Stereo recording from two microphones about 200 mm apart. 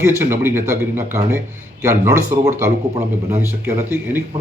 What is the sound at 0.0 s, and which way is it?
Speech, 10° right (ahead or behind).